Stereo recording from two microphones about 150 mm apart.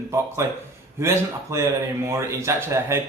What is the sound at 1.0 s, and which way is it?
Speech, 20° right (ahead or behind).